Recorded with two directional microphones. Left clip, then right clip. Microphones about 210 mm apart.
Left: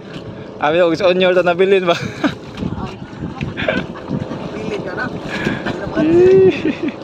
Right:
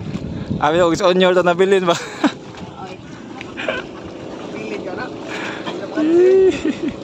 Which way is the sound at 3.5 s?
5° left (ahead or behind).